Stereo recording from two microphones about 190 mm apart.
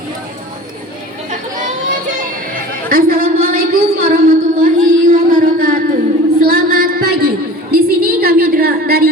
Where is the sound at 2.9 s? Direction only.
50° right (ahead or behind).